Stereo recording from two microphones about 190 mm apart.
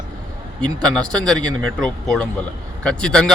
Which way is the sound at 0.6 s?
5° left (ahead or behind).